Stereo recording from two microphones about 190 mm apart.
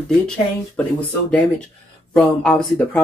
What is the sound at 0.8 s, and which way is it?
Speech, 5° left (ahead or behind).